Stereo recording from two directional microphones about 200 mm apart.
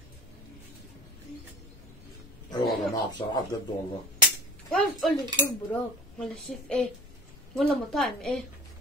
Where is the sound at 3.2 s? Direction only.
25° left (ahead or behind).